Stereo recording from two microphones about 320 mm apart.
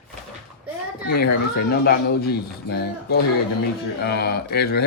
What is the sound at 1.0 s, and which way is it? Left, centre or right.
Speech, left.